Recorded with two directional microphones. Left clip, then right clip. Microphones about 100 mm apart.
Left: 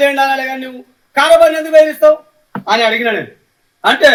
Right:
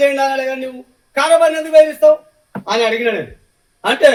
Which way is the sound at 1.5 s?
15° left (ahead or behind).